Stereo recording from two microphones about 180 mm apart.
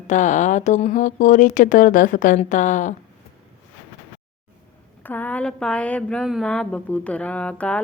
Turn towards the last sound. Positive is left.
turn(degrees=5)  # may be behind; listen again after turning